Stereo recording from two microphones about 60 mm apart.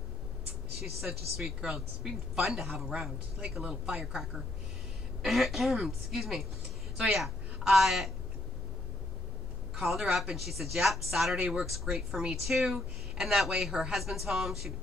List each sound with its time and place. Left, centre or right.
1.0 s a woman's voice: centre
9.8 s a woman's voice: centre